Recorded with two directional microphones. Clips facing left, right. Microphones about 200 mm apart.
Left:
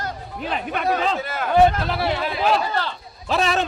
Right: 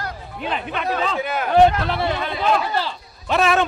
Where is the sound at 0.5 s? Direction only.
50° left (ahead or behind).